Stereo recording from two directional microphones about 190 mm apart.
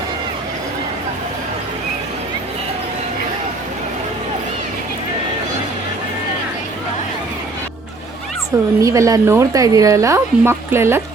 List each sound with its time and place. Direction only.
8.8 s speech: 15° right (ahead or behind)